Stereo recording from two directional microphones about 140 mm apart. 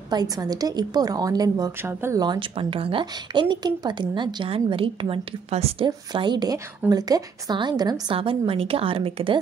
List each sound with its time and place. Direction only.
0.1 s a woman's voice: 30° right (ahead or behind)
1.8 s speech: 15° right (ahead or behind)
2.2 s speech: 35° right (ahead or behind)
5.9 s speech: 30° right (ahead or behind)